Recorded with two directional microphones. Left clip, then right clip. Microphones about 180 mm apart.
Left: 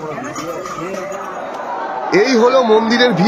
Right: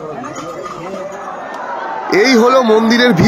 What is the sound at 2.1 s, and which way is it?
A man's voice, 25° right (ahead or behind).